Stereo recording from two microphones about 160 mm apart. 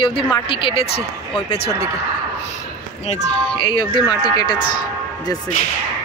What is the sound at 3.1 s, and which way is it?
A man's voice, 30° left (ahead or behind).